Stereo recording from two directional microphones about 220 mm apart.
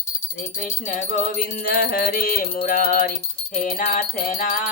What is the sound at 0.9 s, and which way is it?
Music, 40° left (ahead or behind).